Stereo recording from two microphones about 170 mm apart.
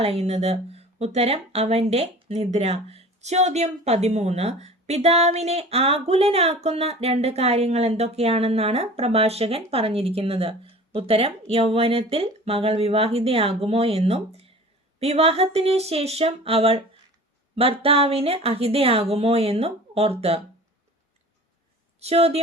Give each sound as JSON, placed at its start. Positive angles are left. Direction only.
{"t": 0.0, "sound": "speech", "side_deg": -35}
{"t": 22.0, "sound": "speech", "side_deg": -35}